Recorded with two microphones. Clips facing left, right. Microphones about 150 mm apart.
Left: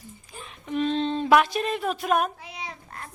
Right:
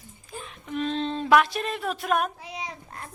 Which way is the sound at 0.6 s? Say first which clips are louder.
Left 3 dB; centre (ahead or behind).